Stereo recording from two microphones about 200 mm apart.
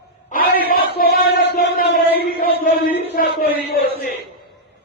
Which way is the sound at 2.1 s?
50° left (ahead or behind).